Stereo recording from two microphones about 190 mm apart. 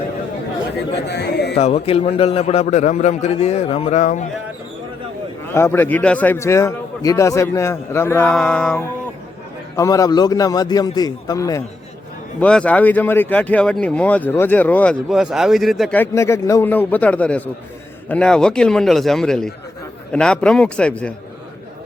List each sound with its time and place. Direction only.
1.0 s speech: 60° left (ahead or behind)
1.5 s a man's voice: 35° left (ahead or behind)
5.4 s speech: 15° left (ahead or behind)
9.7 s a man's voice: 15° left (ahead or behind)
12.4 s a man's voice: 5° left (ahead or behind)